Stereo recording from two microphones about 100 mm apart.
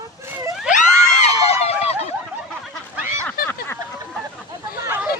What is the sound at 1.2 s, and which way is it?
Run, 90° left.